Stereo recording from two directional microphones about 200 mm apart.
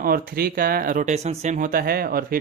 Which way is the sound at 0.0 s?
45° right (ahead or behind).